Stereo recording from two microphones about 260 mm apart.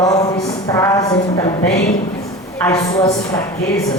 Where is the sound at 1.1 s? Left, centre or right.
Left.